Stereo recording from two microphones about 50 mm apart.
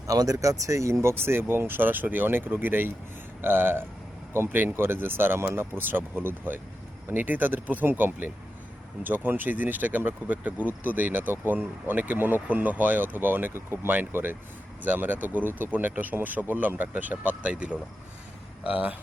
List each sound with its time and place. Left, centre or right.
0.3 s speech: right
1.1 s speech: right